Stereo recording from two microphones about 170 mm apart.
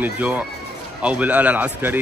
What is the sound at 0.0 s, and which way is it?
A man's voice, 10° right (ahead or behind).